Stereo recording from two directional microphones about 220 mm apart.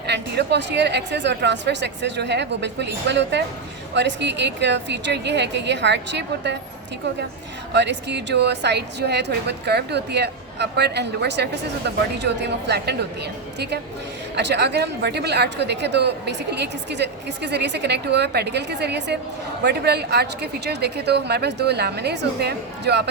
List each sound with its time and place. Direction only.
0.1 s a woman's voice: 50° right (ahead or behind)
7.7 s a woman's voice: 50° right (ahead or behind)